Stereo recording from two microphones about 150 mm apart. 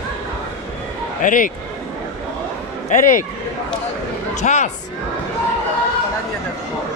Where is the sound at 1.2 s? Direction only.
60° left (ahead or behind).